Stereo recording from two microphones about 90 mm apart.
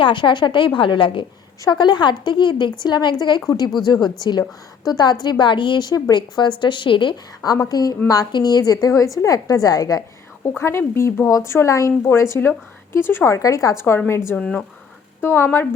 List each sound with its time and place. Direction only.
0.0 s speech: 65° left (ahead or behind)
1.7 s a woman's voice: 55° left (ahead or behind)
7.4 s a woman's voice: 45° left (ahead or behind)
10.6 s speech: 30° left (ahead or behind)
14.3 s speech: 10° left (ahead or behind)
15.2 s speech: 25° left (ahead or behind)